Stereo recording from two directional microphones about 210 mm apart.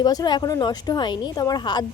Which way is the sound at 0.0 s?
20° left (ahead or behind).